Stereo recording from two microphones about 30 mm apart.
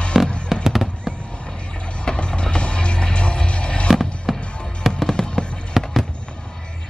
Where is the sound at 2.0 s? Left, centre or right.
Left.